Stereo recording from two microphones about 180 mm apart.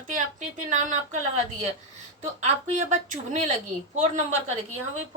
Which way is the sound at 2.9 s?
40° right (ahead or behind).